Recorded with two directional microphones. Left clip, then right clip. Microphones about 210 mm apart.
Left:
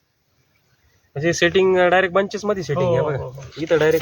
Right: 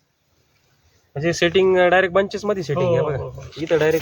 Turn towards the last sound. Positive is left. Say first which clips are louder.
# left 1 dB
turn(degrees=35)  # may be behind; listen again after turning